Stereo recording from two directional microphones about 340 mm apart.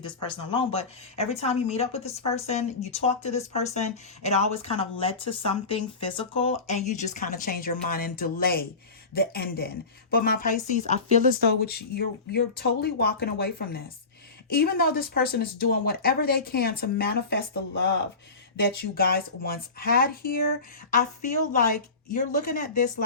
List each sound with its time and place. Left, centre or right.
0.0 s speech: centre
21.5 s speech: left